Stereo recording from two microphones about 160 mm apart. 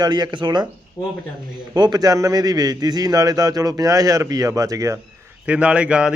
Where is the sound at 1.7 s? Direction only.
25° right (ahead or behind).